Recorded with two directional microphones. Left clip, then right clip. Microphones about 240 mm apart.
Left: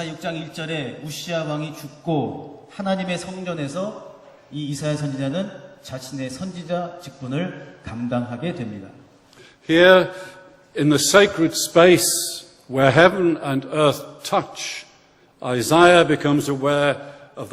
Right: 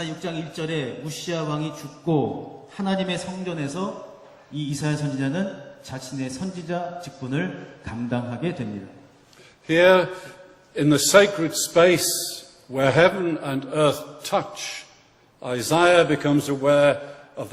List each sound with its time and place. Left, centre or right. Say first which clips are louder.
0.0 s a man's voice: left 2 dB; right
0.7 s a man's voice: even; centre
9.6 s a man's voice: left 3 dB; left